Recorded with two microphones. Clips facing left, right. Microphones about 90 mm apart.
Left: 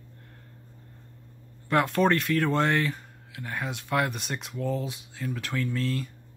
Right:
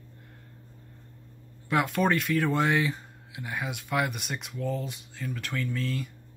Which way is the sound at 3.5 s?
5° right (ahead or behind).